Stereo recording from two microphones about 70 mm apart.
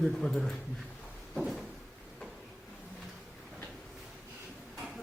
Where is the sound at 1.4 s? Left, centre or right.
Centre.